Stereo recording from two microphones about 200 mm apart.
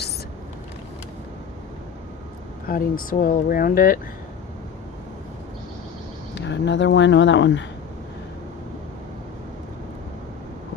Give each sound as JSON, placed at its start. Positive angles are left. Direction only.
{"t": 2.6, "sound": "speech", "side_deg": 45}
{"t": 6.3, "sound": "speech", "side_deg": 60}